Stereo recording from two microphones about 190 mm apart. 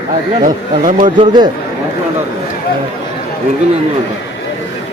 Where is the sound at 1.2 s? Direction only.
25° right (ahead or behind).